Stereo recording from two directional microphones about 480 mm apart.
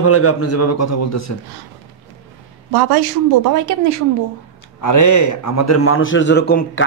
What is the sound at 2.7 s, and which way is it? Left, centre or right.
Speech, right.